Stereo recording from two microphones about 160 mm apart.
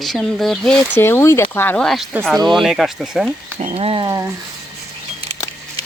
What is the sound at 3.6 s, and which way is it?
Speech, 40° right (ahead or behind).